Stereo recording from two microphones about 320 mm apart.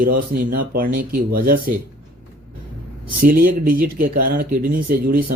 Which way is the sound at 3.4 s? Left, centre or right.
Right.